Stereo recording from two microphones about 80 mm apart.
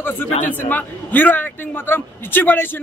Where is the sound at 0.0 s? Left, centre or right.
Left.